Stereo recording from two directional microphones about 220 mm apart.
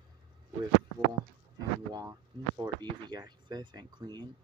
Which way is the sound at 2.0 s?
15° right (ahead or behind).